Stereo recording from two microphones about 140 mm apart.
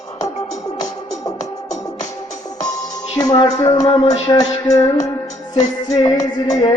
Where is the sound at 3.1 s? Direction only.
30° left (ahead or behind).